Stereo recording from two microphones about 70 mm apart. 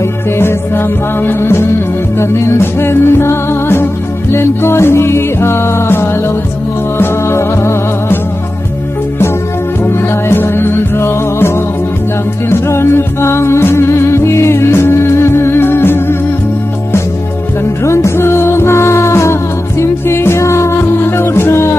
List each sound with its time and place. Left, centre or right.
0.4 s music: left
9.8 s music: left
17.8 s music: left